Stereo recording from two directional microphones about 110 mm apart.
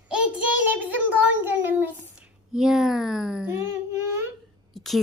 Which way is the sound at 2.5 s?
5° right (ahead or behind).